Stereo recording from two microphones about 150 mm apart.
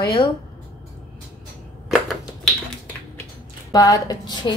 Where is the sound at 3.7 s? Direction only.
25° left (ahead or behind).